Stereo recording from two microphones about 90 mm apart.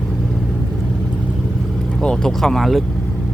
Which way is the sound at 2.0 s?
10° left (ahead or behind).